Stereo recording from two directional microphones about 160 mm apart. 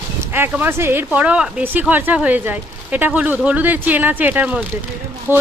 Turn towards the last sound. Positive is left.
turn(degrees=-15)  # may be behind; listen again after turning